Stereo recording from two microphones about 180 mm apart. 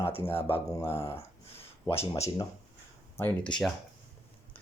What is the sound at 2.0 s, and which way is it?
Speech, 35° left (ahead or behind).